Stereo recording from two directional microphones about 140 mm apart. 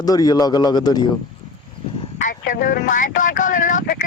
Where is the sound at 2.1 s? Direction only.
70° left (ahead or behind).